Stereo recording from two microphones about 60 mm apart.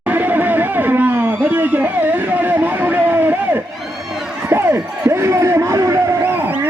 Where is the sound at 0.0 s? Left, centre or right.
Right.